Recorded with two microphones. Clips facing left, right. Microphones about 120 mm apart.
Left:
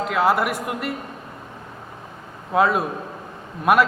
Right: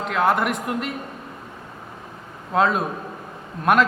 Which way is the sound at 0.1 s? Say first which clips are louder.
Even; 5° left (ahead or behind).